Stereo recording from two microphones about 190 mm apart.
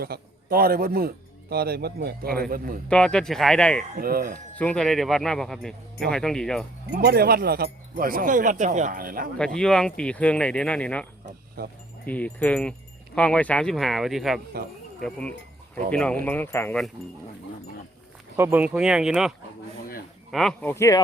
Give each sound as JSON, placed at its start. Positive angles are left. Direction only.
{"t": 0.0, "sound": "speech", "side_deg": -50}
{"t": 2.9, "sound": "speech", "side_deg": 5}
{"t": 3.9, "sound": "speech", "side_deg": -50}
{"t": 4.5, "sound": "speech", "side_deg": 5}
{"t": 6.9, "sound": "speech", "side_deg": -55}
{"t": 9.4, "sound": "speech", "side_deg": 5}
{"t": 12.0, "sound": "speech", "side_deg": 5}
{"t": 18.3, "sound": "speech", "side_deg": -10}
{"t": 20.3, "sound": "speech", "side_deg": 5}